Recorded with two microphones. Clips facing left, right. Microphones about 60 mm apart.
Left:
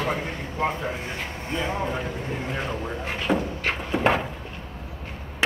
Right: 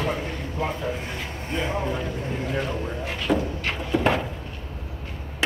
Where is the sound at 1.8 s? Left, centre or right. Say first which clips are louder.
Even; centre.